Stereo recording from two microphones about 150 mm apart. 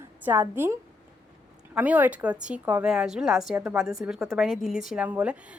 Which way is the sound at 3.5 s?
15° right (ahead or behind).